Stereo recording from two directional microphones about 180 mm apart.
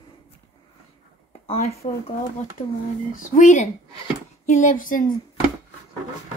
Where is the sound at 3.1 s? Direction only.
45° left (ahead or behind).